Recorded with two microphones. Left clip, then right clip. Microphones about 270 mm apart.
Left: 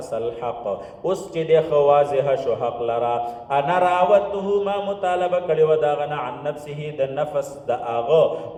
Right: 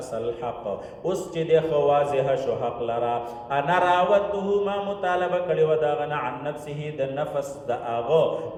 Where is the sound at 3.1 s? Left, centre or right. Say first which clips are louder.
Left 4 dB; left.